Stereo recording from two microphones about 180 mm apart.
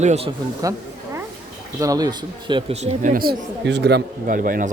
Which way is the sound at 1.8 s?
20° right (ahead or behind).